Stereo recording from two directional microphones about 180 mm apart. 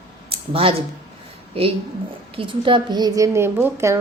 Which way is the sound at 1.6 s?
30° right (ahead or behind).